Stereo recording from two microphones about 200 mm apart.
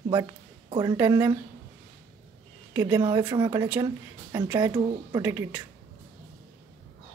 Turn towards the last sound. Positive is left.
turn(degrees=-10)  # may be behind; listen again after turning